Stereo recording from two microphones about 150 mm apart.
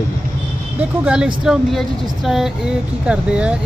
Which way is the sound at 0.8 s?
5° right (ahead or behind).